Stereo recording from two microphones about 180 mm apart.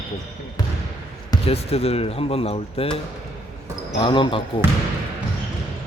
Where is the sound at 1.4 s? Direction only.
35° left (ahead or behind).